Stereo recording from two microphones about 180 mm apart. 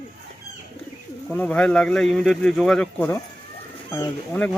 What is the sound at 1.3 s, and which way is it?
Speech, 5° left (ahead or behind).